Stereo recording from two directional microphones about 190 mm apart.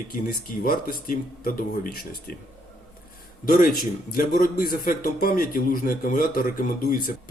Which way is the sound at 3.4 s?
45° left (ahead or behind).